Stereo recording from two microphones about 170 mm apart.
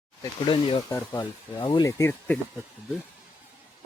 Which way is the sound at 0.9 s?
15° left (ahead or behind).